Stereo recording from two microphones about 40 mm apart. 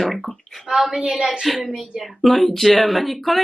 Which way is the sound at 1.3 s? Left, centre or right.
Centre.